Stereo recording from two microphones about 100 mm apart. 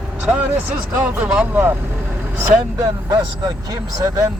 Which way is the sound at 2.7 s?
40° right (ahead or behind).